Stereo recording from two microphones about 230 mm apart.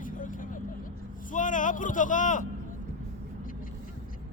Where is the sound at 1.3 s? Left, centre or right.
Left.